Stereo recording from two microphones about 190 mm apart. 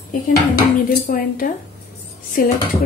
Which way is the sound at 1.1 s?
50° left (ahead or behind).